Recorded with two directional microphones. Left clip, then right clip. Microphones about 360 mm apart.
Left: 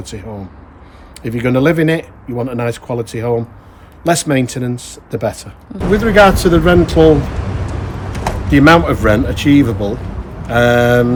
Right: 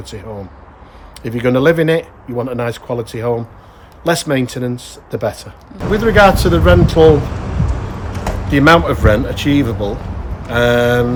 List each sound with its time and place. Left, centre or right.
0.0 s speech: centre
7.3 s a sound: left
8.4 s speech: centre